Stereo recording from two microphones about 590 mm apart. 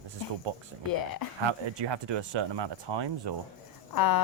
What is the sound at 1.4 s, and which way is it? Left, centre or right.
Speech, right.